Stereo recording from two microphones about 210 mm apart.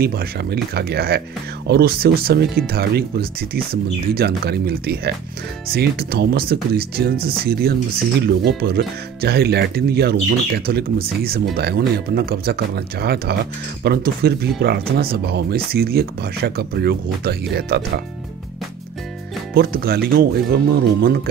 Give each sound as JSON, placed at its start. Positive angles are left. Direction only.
{"t": 0.0, "sound": "speech", "side_deg": -45}
{"t": 19.5, "sound": "speech", "side_deg": -45}